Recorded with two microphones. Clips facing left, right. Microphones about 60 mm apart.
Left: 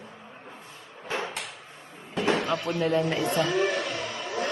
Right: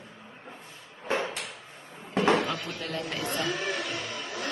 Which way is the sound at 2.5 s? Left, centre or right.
Centre.